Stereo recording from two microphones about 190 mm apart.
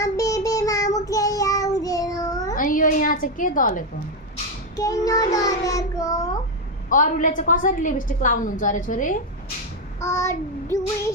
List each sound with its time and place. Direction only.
0.0 s child singing: 15° left (ahead or behind)
2.6 s a sound: 45° left (ahead or behind)
4.8 s child singing: 20° left (ahead or behind)
6.9 s a woman's voice: 45° left (ahead or behind)
10.0 s child singing: 15° left (ahead or behind)